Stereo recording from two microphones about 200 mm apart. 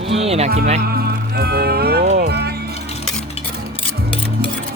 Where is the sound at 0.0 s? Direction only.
30° right (ahead or behind).